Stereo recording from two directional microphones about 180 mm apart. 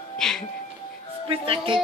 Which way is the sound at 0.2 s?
5° left (ahead or behind).